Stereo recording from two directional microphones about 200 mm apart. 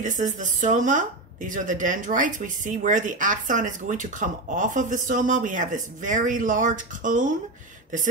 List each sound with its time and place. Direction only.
0.0 s speech: 40° right (ahead or behind)